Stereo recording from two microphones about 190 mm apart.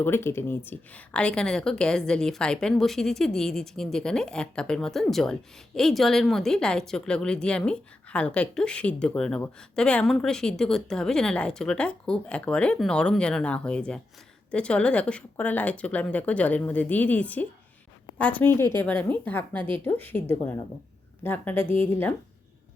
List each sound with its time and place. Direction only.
0.0 s a woman's voice: 10° left (ahead or behind)
21.6 s a woman's voice: 30° right (ahead or behind)
21.8 s a woman's voice: 10° left (ahead or behind)